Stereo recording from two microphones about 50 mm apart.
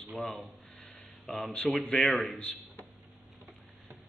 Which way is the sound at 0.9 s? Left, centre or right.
Centre.